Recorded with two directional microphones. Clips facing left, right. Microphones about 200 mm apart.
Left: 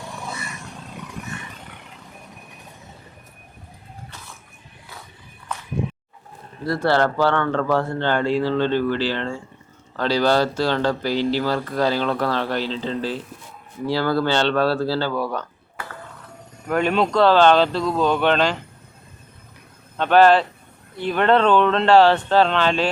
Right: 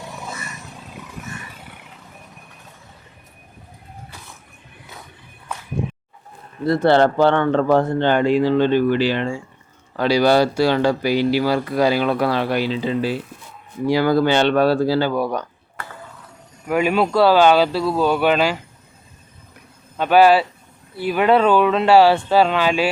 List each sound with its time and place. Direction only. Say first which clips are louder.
0.0 s a sound: even; centre (ahead or behind)
6.7 s speech: right 5 dB; 20° right (ahead or behind)
16.6 s speech: right 2 dB; 5° right (ahead or behind)
20.0 s speech: right 1 dB; 10° right (ahead or behind)